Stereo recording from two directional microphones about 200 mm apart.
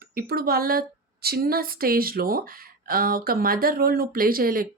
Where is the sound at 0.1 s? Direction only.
50° right (ahead or behind).